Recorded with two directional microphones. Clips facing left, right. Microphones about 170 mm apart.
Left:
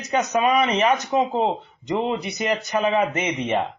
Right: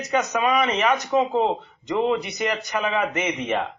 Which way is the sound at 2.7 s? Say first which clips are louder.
Left 6 dB; 25° left (ahead or behind).